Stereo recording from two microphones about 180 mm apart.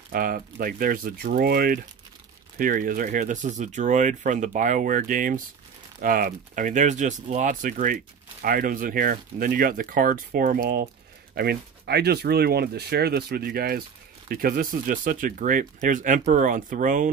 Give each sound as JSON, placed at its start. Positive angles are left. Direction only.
{"t": 0.1, "sound": "speech", "side_deg": -50}